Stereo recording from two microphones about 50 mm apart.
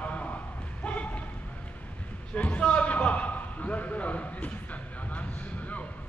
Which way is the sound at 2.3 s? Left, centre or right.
Left.